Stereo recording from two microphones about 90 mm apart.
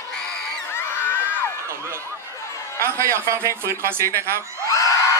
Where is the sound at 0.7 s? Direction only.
25° left (ahead or behind).